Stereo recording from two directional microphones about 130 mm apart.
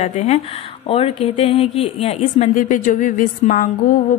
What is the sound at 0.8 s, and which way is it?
A woman's voice, 50° left (ahead or behind).